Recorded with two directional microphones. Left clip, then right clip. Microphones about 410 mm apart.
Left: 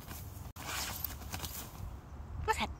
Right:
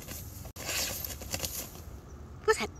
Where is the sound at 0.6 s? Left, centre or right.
Centre.